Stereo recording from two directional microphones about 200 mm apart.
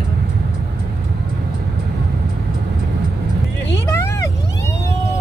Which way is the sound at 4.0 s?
15° left (ahead or behind).